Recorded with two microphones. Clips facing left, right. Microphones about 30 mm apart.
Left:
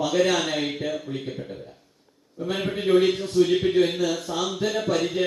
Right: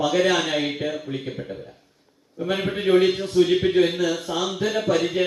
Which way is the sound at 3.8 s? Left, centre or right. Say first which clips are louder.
Right 2 dB; right.